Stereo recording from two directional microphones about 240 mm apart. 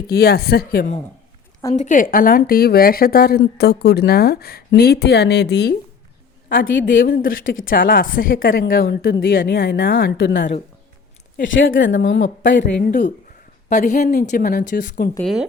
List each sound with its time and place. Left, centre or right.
0.1 s speech: left
6.9 s speech: left
15.1 s speech: centre